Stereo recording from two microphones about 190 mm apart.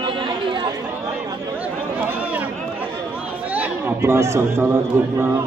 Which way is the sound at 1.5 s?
10° right (ahead or behind).